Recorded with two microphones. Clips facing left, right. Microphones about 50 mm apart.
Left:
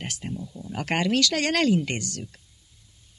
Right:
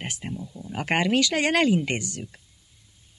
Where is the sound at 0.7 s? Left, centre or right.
Centre.